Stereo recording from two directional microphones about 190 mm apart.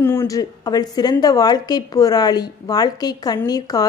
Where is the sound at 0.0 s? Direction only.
15° left (ahead or behind).